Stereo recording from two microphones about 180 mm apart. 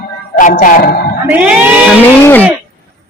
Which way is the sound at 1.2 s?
10° right (ahead or behind).